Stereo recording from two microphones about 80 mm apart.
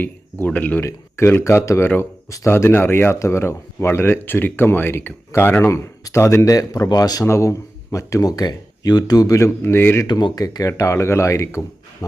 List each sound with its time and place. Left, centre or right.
0.0 s speech: left
0.9 s speech: left
7.3 s speech: left
10.1 s speech: left